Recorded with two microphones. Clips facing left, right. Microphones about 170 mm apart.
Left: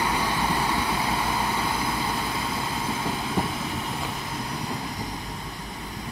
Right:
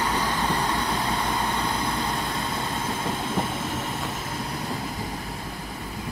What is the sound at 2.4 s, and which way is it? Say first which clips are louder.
Train: even; centre (ahead or behind).